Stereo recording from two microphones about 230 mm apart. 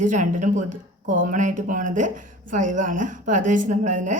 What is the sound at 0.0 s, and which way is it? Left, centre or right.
Speech, right.